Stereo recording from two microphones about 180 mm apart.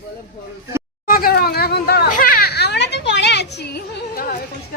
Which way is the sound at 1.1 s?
55° left (ahead or behind).